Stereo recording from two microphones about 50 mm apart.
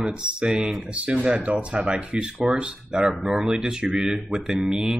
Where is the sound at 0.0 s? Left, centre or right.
Centre.